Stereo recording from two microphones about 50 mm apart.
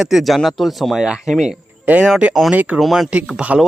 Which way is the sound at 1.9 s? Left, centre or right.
Right.